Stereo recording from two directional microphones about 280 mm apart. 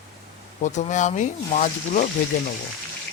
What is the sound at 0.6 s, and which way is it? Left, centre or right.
A man's voice, left.